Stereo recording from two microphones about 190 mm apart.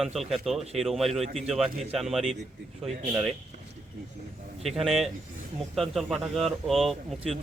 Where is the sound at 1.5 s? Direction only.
Centre (ahead or behind).